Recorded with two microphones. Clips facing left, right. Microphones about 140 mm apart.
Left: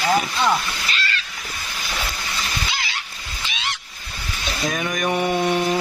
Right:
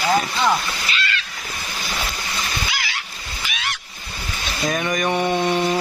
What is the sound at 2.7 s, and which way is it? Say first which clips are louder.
Fowl: right 1 dB; 25° left (ahead or behind).